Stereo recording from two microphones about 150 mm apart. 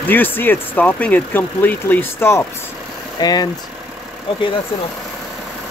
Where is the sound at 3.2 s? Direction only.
25° left (ahead or behind).